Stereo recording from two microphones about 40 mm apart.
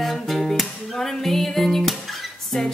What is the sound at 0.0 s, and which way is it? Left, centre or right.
Music, centre.